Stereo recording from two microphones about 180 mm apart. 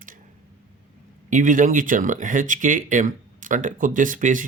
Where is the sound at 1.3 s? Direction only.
45° right (ahead or behind).